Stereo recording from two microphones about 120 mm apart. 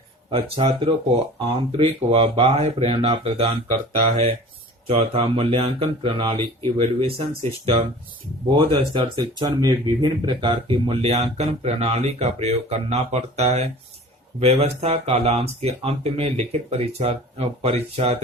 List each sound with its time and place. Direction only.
0.3 s speech: 50° right (ahead or behind)
9.1 s speech: 35° right (ahead or behind); by 18.2 s 60° right (ahead or behind)